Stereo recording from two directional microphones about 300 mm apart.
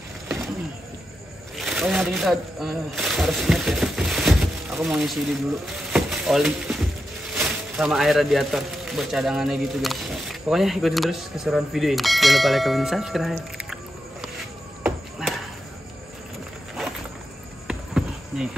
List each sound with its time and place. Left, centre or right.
1.6 s speech: centre
5.9 s a sound: centre
7.3 s speech: centre
14.8 s music: centre
17.6 s cricket: centre